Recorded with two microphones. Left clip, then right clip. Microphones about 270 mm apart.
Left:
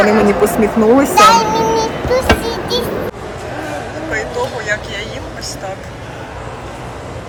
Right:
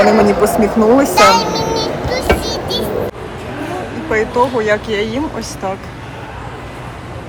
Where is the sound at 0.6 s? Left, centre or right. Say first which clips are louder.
Left 1 dB; centre.